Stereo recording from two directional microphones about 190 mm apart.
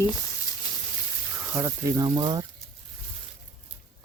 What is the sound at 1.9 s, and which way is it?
Speech, 25° right (ahead or behind).